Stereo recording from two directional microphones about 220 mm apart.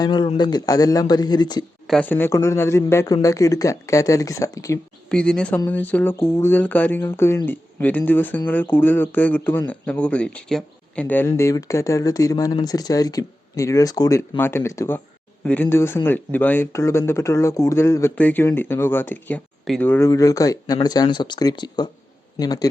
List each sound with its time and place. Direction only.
0.0 s speech: 20° left (ahead or behind)
1.9 s speech: 5° left (ahead or behind)
5.0 s speech: 5° left (ahead or behind)